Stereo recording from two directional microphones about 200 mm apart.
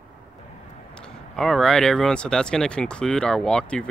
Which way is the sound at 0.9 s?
5° left (ahead or behind).